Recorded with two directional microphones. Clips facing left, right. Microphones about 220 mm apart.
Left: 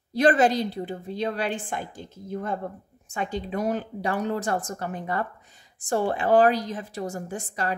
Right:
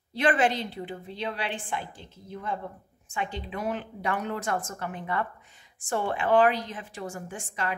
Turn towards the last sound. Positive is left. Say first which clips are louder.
# left 4 dB
turn(degrees=40)  # may be behind; listen again after turning